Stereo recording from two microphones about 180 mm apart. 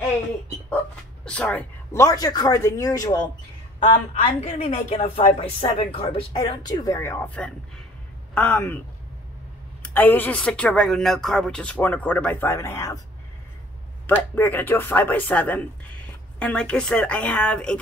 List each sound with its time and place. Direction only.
1.2 s speech: 5° left (ahead or behind)
4.1 s speech: 35° left (ahead or behind)
6.3 s speech: 20° left (ahead or behind)
9.9 s speech: 10° left (ahead or behind)
14.0 s a woman's voice: 10° left (ahead or behind)